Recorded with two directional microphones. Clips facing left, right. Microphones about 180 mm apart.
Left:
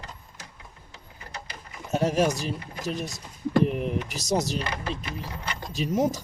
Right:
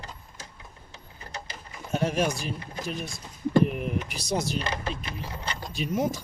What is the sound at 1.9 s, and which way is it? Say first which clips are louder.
Speech: left 3 dB; 40° left (ahead or behind).